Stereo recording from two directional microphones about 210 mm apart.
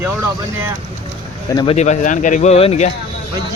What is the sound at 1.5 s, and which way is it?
Speech, 20° left (ahead or behind).